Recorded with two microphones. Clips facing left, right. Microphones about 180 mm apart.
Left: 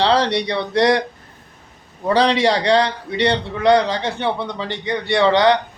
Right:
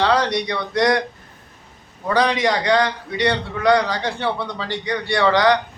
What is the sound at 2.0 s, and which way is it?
A man's voice, 30° left (ahead or behind).